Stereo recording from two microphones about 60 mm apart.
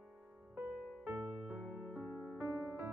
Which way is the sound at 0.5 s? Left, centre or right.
Right.